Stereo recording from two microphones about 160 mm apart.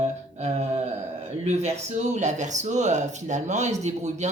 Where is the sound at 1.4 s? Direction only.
45° right (ahead or behind).